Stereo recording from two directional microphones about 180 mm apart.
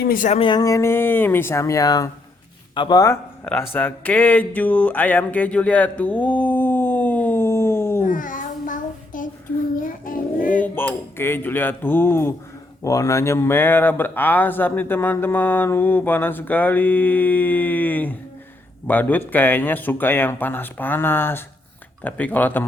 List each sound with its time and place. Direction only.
0.0 s speech: 50° left (ahead or behind)
0.3 s speech: 25° left (ahead or behind)
3.7 s a sound: 10° left (ahead or behind)
8.0 s child singing: 50° left (ahead or behind)
10.1 s a sound: 50° left (ahead or behind)
10.6 s speech: 10° left (ahead or behind)